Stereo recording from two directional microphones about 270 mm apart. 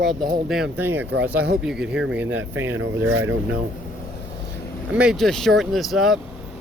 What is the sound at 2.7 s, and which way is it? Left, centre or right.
Speech, right.